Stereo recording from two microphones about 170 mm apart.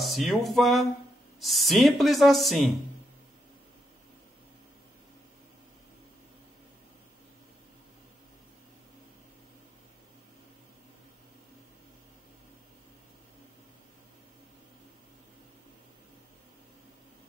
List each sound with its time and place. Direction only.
0.0 s speech: centre (ahead or behind)